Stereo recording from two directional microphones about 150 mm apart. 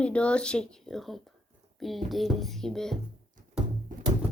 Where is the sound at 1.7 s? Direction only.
Centre (ahead or behind).